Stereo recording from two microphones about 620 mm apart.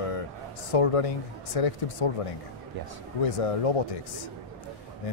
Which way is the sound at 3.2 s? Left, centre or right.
Left.